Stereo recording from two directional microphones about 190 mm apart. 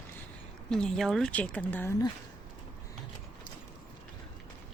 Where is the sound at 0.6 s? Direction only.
5° left (ahead or behind).